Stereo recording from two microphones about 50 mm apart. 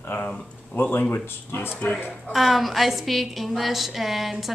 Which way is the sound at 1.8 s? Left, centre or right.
Left.